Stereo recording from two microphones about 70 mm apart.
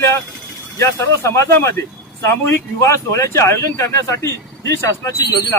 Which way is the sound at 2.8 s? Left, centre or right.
Left.